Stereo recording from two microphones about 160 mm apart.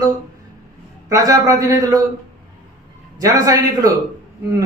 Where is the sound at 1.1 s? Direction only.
20° right (ahead or behind).